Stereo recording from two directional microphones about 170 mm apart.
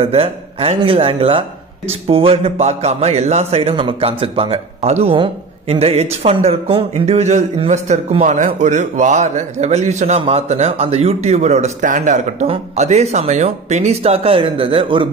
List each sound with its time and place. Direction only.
0.0 s a man's voice: 35° right (ahead or behind)